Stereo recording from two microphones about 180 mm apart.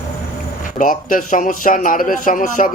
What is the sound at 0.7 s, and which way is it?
A man's voice, 50° left (ahead or behind).